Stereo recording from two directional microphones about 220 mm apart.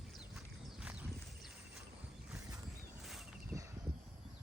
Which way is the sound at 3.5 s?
15° right (ahead or behind).